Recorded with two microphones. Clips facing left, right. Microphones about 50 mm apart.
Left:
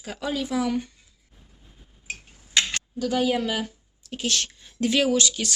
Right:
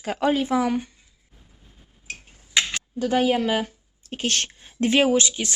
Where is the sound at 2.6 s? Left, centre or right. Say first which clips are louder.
Right 1 dB; right.